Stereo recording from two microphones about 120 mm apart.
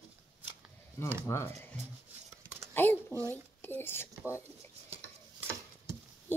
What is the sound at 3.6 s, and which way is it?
Speech, 20° left (ahead or behind).